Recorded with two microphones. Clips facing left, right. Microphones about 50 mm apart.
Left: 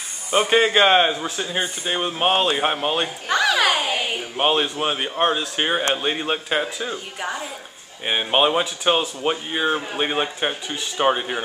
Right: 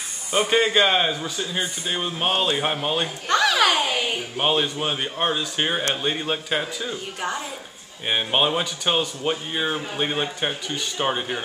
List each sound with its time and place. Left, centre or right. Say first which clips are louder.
0.3 s speech: left 3 dB; centre
3.3 s speech: even; centre
7.2 s a woman's voice: even; centre